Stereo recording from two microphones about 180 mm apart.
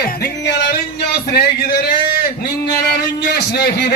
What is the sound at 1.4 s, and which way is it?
Speech, 60° left (ahead or behind).